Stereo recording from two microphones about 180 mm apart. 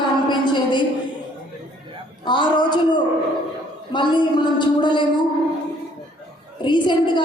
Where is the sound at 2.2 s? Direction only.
25° left (ahead or behind).